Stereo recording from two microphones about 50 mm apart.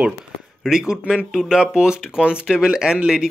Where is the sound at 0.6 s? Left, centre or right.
Centre.